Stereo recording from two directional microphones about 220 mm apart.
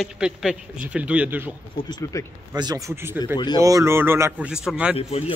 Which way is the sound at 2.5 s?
15° right (ahead or behind).